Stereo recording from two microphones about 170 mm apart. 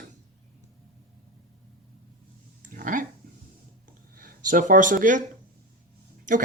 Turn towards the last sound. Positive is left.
turn(degrees=-50)  # may be behind; listen again after turning